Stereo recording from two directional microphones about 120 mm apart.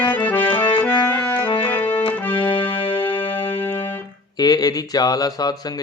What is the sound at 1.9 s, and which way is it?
Accordion, 40° left (ahead or behind).